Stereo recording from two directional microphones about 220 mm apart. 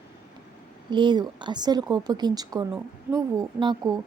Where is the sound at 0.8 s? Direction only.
20° right (ahead or behind).